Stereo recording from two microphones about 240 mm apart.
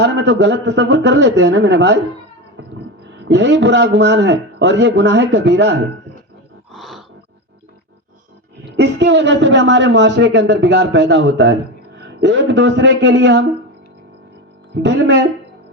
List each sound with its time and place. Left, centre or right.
0.0 s a woman's voice: right
2.6 s music: right
3.2 s a woman's voice: right
6.7 s a sound: centre
8.6 s a woman's voice: right
14.8 s a woman's voice: right